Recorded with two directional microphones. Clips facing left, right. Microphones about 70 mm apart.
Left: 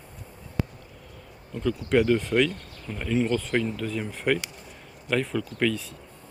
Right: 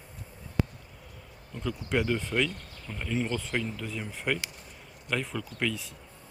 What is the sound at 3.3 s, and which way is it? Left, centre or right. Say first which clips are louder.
Speech: left 6 dB; centre.